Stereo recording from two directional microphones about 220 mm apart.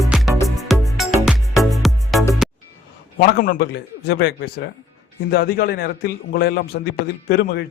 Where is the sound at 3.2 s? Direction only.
40° left (ahead or behind).